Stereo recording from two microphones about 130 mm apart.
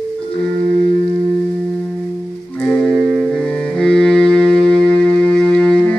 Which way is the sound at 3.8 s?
5° left (ahead or behind).